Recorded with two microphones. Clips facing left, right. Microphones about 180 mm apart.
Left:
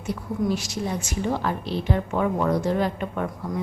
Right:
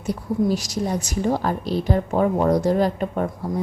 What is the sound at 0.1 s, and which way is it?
A woman's voice, 40° right (ahead or behind).